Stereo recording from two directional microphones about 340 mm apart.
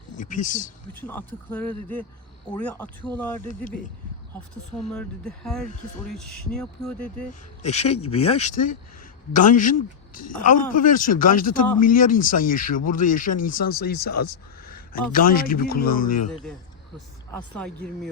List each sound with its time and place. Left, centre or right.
0.2 s speech: left
1.0 s speech: centre
4.8 s speech: centre
7.6 s speech: centre